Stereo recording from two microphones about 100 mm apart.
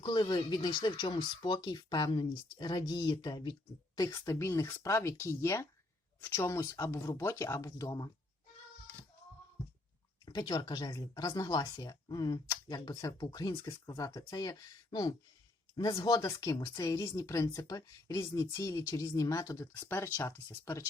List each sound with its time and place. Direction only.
0.0 s speech: 50° left (ahead or behind)
10.2 s speech: 40° left (ahead or behind)
20.1 s speech: 20° left (ahead or behind)